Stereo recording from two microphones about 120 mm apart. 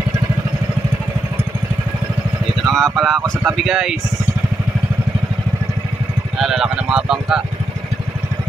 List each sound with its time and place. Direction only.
2.6 s speech: centre (ahead or behind)
6.3 s speech: 5° right (ahead or behind)